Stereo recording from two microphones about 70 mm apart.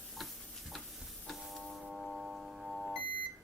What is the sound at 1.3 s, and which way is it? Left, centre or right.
Music, centre.